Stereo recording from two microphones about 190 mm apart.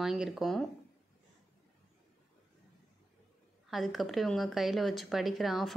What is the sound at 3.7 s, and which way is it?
Speech, centre (ahead or behind).